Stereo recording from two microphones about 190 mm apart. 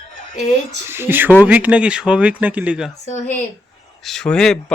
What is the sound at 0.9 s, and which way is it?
Speech, 10° right (ahead or behind).